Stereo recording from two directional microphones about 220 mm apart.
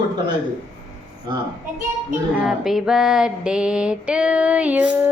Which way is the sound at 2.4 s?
Centre (ahead or behind).